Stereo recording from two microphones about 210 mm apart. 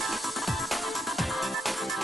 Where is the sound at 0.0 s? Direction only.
Centre (ahead or behind).